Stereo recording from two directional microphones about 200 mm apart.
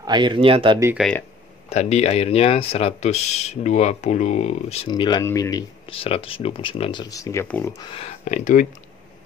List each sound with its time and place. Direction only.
0.0 s speech: 20° right (ahead or behind)
0.9 s speech: 5° left (ahead or behind)
1.7 s speech: 35° left (ahead or behind)
4.8 s speech: 20° left (ahead or behind); by 8.6 s 40° left (ahead or behind)